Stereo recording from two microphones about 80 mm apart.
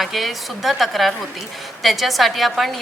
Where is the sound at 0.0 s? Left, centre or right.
Centre.